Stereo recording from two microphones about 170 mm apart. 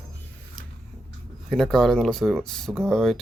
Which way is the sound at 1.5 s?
5° left (ahead or behind).